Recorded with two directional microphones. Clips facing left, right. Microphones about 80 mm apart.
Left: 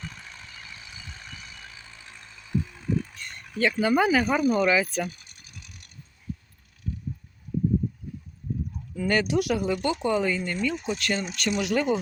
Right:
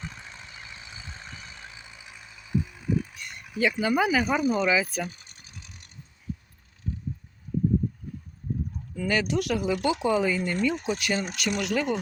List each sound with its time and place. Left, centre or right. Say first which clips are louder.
0.0 s vehicle: right 1 dB; right
5.0 s mechanisms: left 2 dB; right
9.0 s speech: left 2 dB; centre
11.3 s speech: left 2 dB; centre